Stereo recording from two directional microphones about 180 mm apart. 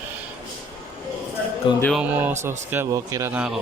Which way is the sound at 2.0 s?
10° right (ahead or behind).